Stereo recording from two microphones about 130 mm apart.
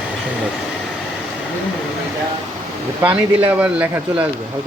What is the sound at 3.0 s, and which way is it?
Speech, 10° right (ahead or behind).